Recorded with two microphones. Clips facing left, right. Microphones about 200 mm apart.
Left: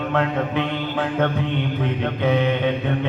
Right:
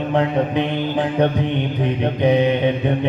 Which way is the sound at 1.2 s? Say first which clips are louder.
Right 4 dB; 15° right (ahead or behind).